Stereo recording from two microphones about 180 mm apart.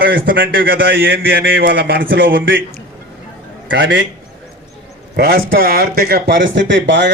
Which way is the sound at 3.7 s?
90° right.